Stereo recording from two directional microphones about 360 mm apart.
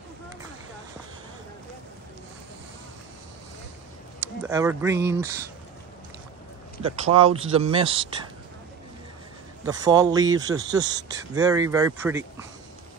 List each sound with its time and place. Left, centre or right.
4.2 s speech: centre
6.8 s speech: centre
9.7 s speech: centre